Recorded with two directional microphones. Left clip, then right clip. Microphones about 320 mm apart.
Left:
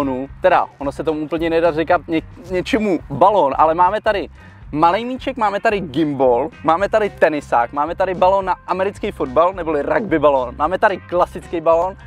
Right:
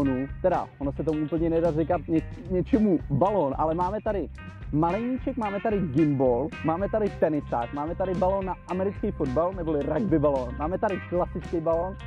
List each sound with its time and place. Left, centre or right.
0.4 s speech: centre
5.9 s speech: left
8.3 s speech: left
8.6 s speech: centre